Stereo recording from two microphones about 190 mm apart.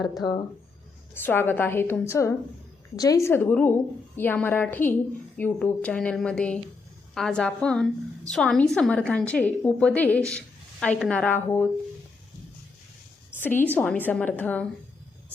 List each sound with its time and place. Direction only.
0.0 s speech: 20° left (ahead or behind)
1.1 s a woman's voice: 10° left (ahead or behind)
13.4 s a woman's voice: 10° left (ahead or behind)